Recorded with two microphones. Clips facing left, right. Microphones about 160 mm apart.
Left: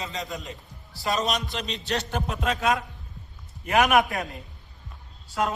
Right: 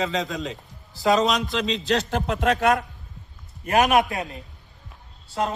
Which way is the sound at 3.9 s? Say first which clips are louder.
Right 1 dB; 20° right (ahead or behind).